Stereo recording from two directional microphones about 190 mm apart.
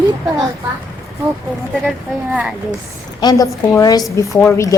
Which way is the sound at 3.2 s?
20° left (ahead or behind).